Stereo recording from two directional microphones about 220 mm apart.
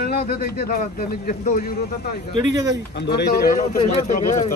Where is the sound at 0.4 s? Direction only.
40° left (ahead or behind).